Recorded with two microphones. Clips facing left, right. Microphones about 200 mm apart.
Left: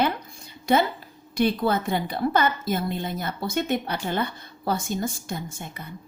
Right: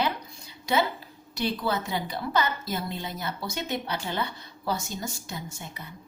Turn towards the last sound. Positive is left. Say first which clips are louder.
# left 5 dB
turn(degrees=50)  # may be behind; listen again after turning